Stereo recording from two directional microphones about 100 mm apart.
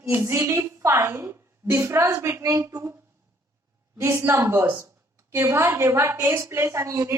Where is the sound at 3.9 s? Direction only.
25° right (ahead or behind).